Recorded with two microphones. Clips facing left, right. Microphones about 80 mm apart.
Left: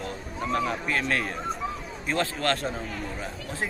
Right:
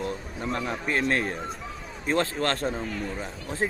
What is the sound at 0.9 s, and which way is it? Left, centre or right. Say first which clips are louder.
A man's voice: right 2 dB; right.